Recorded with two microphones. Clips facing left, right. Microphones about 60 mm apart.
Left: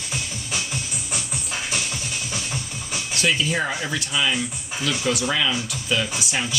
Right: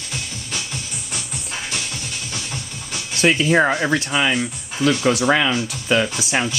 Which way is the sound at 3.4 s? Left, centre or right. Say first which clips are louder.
Right 8 dB; right.